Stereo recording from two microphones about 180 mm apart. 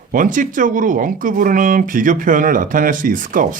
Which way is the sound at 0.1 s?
45° right (ahead or behind).